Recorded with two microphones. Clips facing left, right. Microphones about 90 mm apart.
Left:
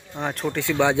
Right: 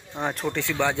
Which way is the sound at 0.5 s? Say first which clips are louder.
Left 8 dB; 15° left (ahead or behind).